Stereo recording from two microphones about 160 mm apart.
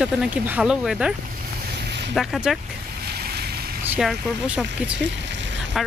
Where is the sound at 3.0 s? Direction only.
75° right (ahead or behind).